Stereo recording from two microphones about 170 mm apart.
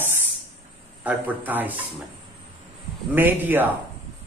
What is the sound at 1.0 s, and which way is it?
Speech, 10° right (ahead or behind).